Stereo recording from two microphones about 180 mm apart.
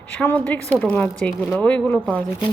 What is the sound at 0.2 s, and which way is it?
Speech, 10° left (ahead or behind).